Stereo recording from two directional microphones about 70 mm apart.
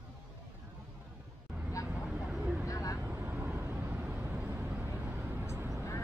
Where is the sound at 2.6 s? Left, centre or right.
Left.